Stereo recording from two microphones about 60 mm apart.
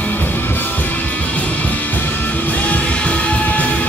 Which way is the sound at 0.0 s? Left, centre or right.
Left.